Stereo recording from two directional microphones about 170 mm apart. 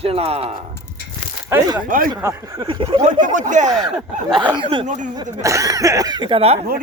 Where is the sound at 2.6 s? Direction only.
30° right (ahead or behind).